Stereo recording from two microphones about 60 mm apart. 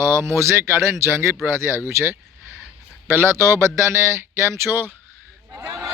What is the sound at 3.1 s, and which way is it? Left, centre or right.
A man's voice, right.